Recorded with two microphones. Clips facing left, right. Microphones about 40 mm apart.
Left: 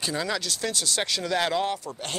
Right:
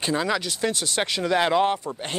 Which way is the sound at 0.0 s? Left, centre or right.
Right.